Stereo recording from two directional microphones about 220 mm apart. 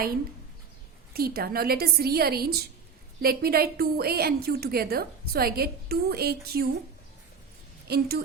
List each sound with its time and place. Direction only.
1.1 s a woman's voice: 45° right (ahead or behind)
7.9 s a woman's voice: 45° right (ahead or behind)